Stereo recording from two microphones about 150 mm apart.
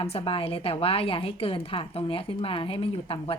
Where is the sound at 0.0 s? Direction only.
40° left (ahead or behind).